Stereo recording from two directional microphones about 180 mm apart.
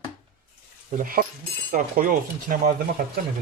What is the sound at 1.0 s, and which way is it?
Speech, 50° right (ahead or behind).